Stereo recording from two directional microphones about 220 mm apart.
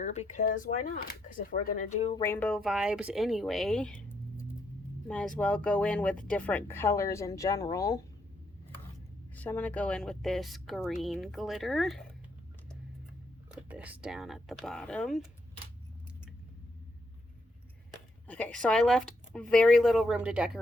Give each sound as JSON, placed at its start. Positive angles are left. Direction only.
{"t": 0.0, "sound": "speech", "side_deg": 30}
{"t": 2.2, "sound": "speech", "side_deg": 10}
{"t": 9.3, "sound": "speech", "side_deg": 5}
{"t": 13.5, "sound": "speech", "side_deg": -5}
{"t": 18.3, "sound": "speech", "side_deg": 5}